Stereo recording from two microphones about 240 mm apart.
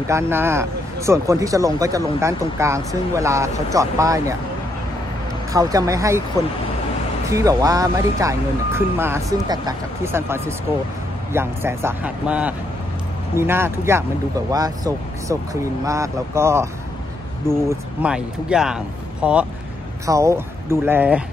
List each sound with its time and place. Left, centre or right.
0.1 s speech: centre
5.5 s speech: centre
7.2 s speech: centre